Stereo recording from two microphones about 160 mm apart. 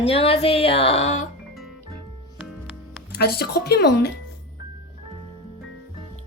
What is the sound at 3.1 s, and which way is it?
Speech, 80° left.